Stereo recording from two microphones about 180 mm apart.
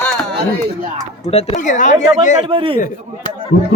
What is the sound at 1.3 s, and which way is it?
Speech, 40° left (ahead or behind).